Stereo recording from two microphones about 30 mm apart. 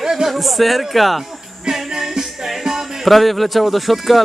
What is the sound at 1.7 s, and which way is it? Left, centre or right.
Music, right.